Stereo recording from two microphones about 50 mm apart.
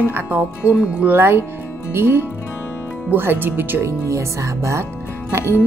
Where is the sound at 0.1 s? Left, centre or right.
Right.